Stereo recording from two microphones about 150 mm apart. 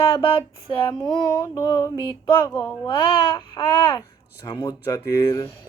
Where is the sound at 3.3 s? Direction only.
25° left (ahead or behind).